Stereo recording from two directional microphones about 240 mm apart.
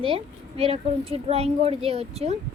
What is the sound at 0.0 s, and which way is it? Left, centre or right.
A woman's voice, right.